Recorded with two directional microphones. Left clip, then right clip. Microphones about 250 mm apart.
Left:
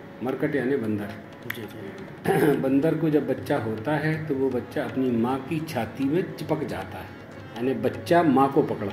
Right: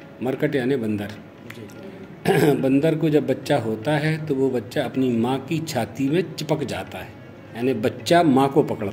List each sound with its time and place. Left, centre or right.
0.2 s speech: right
2.2 s speech: right